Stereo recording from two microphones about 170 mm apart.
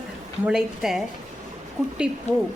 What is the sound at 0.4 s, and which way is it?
Speech, 5° right (ahead or behind).